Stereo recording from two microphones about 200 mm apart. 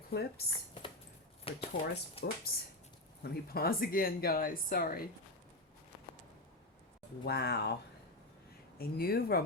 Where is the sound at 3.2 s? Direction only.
50° left (ahead or behind).